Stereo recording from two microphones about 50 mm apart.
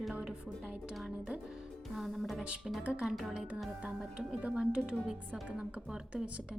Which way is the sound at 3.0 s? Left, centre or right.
Centre.